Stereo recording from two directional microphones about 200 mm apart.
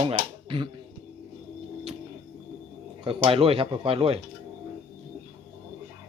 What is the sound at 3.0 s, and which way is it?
Speech, 25° right (ahead or behind).